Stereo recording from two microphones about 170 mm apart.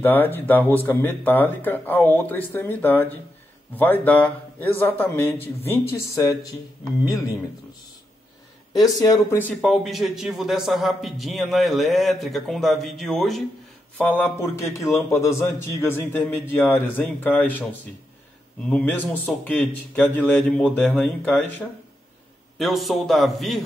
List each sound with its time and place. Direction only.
0.0 s speech: 10° left (ahead or behind)
8.8 s a man's voice: 20° left (ahead or behind)
18.7 s a man's voice: 10° left (ahead or behind)